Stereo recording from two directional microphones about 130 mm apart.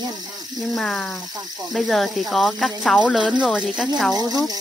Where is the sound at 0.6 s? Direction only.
Centre (ahead or behind).